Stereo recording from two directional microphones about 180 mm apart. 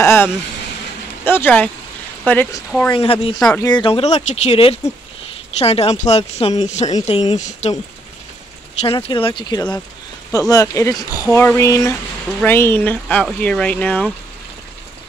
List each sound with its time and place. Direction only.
0.0 s a sound: 15° left (ahead or behind)
1.2 s speech: 10° left (ahead or behind)
2.9 s speech: 30° left (ahead or behind)
3.3 s speech: 5° left (ahead or behind)
3.6 s speech: 25° left (ahead or behind)
8.8 s speech: 30° left (ahead or behind); by 14.1 s 5° left (ahead or behind)